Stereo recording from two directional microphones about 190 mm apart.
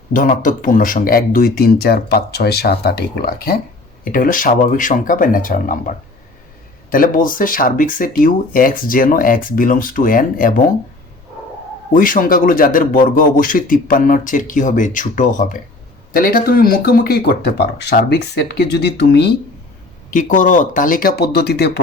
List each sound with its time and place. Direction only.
0.1 s speech: 45° left (ahead or behind)
6.9 s speech: 45° left (ahead or behind)
11.9 s speech: 45° left (ahead or behind)
20.1 s speech: 45° left (ahead or behind); by 21.7 s 60° left (ahead or behind)